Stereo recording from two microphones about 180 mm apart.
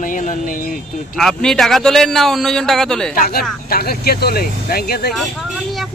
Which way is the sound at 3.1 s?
55° left (ahead or behind).